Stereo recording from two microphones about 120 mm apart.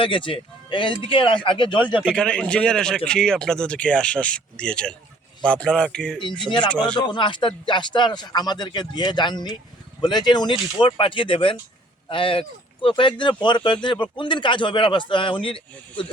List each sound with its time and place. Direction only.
0.0 s speech: 45° left (ahead or behind)
2.0 s a man's voice: 5° left (ahead or behind)
7.0 s speech: 40° left (ahead or behind)